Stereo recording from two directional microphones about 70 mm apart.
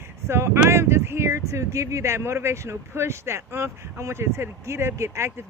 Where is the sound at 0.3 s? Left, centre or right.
Right.